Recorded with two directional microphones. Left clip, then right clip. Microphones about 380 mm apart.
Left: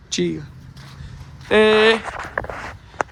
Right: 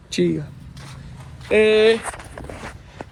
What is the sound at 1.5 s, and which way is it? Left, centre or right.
Speech, centre.